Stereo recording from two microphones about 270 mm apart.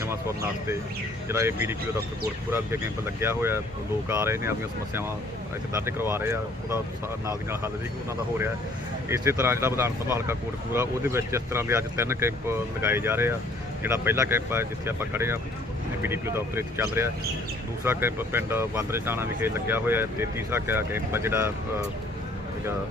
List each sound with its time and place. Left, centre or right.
0.0 s speech: centre
3.2 s speech: centre
5.7 s speech: centre
9.0 s speech: centre